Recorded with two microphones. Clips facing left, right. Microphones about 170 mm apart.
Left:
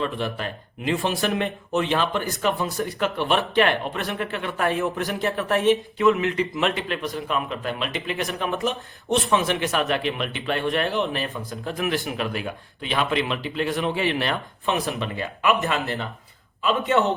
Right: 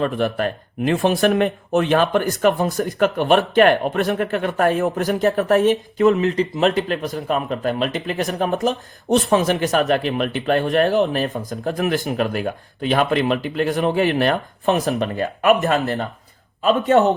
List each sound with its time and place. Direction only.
0.0 s speech: 50° right (ahead or behind)
2.4 s a man's voice: 45° right (ahead or behind)